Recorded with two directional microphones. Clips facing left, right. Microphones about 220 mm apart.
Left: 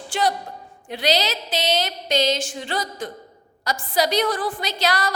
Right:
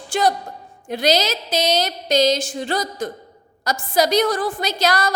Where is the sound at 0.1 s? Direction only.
45° right (ahead or behind).